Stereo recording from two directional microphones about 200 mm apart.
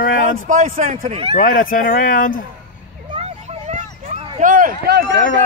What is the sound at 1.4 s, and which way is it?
Speech, 45° left (ahead or behind).